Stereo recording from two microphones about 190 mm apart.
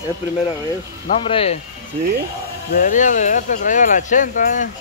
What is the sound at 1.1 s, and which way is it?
Speech, 30° left (ahead or behind).